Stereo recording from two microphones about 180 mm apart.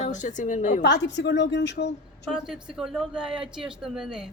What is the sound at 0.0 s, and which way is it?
Speech, 40° left (ahead or behind).